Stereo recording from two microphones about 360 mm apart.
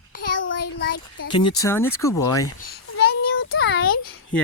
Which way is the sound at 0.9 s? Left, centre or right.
Left.